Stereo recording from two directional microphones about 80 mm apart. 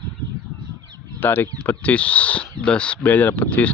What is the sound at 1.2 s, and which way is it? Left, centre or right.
Speech, left.